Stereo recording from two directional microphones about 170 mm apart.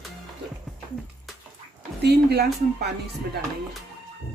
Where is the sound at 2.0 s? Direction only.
75° right (ahead or behind).